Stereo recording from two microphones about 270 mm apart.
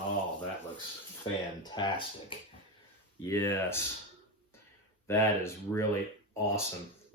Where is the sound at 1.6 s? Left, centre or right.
Centre.